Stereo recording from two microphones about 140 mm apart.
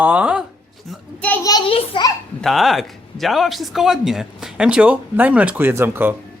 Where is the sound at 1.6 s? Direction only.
40° left (ahead or behind).